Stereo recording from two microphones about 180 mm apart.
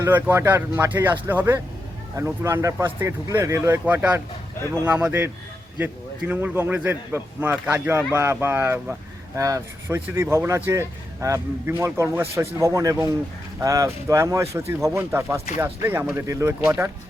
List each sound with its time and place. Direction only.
0.0 s a man's voice: 10° right (ahead or behind)